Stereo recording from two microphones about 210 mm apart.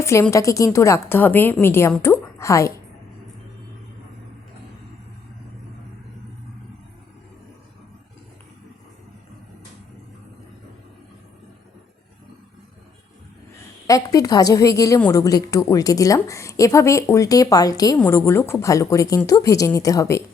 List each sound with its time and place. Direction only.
0.0 s a woman's voice: 15° left (ahead or behind)
13.8 s a woman's voice: 15° left (ahead or behind)